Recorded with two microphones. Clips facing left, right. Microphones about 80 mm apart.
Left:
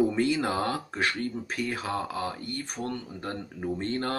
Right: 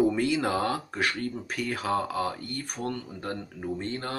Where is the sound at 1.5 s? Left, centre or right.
Left.